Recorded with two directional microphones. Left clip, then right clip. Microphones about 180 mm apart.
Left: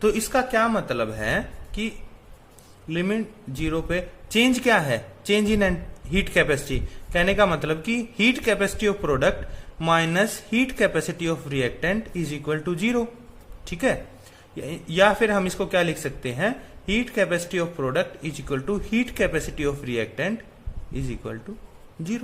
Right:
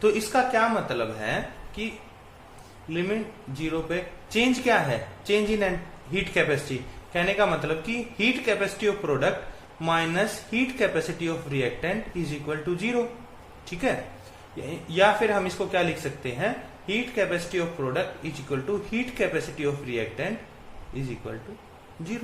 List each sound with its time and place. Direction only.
0.0 s speech: 50° left (ahead or behind)
2.9 s a man's voice: 55° left (ahead or behind)
14.5 s a man's voice: 55° left (ahead or behind)